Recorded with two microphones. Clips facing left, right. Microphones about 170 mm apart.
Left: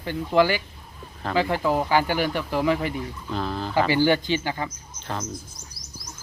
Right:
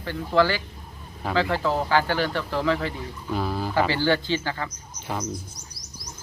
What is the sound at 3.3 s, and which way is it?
Speech, 10° right (ahead or behind).